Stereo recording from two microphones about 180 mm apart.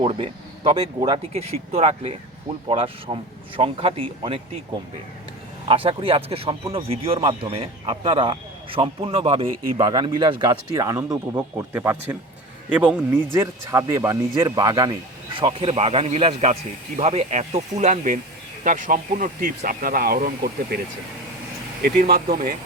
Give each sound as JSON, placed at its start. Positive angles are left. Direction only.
{"t": 0.0, "sound": "speech", "side_deg": -30}
{"t": 5.6, "sound": "speech", "side_deg": -30}
{"t": 21.8, "sound": "speech", "side_deg": -55}